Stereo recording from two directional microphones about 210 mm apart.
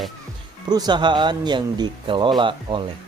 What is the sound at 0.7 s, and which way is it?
Speech, 20° right (ahead or behind).